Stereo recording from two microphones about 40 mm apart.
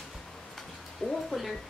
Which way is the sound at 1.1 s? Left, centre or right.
Centre.